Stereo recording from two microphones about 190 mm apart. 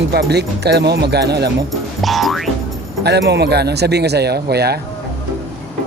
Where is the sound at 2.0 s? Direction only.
Centre (ahead or behind).